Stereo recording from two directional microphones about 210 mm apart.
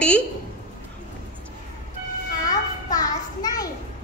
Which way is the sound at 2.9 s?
15° left (ahead or behind).